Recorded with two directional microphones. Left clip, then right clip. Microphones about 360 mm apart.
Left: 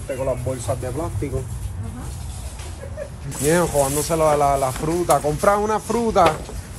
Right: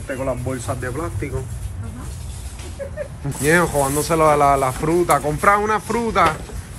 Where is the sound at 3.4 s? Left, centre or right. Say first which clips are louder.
Right 2 dB; centre.